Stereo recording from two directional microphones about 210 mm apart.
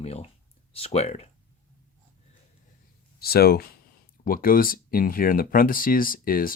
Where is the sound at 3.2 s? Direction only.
45° left (ahead or behind).